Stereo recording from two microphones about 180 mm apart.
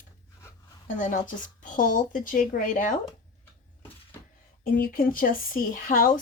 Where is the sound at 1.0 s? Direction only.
45° left (ahead or behind).